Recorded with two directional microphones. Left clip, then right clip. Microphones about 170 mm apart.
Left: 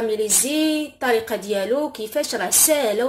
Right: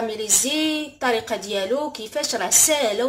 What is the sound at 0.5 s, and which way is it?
Speech, 20° left (ahead or behind).